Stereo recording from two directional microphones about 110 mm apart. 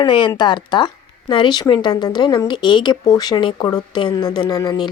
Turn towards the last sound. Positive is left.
turn(degrees=40)  # may be behind; listen again after turning